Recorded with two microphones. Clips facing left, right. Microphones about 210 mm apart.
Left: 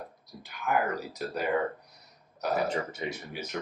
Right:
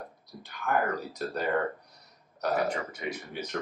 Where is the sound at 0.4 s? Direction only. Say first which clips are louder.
Even; 5° left (ahead or behind).